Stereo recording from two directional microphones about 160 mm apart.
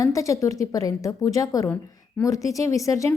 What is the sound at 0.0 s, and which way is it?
A woman's voice, 20° left (ahead or behind).